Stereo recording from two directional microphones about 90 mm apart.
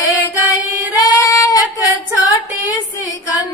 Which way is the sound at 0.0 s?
40° left (ahead or behind).